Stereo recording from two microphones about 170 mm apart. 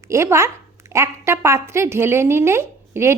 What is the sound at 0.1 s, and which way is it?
A woman's voice, 15° right (ahead or behind).